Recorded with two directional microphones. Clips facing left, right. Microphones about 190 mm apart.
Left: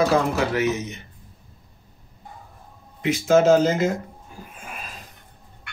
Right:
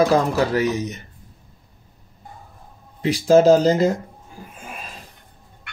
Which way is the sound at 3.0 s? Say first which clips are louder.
Right 3 dB; 35° right (ahead or behind).